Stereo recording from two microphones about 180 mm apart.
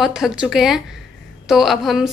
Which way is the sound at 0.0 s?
Centre (ahead or behind).